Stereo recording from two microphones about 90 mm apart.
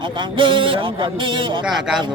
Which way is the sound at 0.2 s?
70° right (ahead or behind).